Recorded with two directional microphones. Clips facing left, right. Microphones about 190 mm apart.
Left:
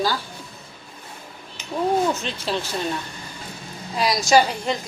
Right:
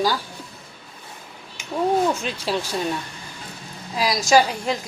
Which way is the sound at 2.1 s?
10° right (ahead or behind).